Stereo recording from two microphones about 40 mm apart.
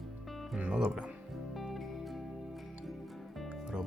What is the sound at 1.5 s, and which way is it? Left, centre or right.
Music, centre.